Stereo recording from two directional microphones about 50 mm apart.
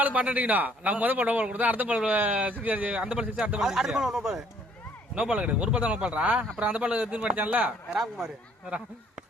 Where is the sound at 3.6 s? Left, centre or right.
Centre.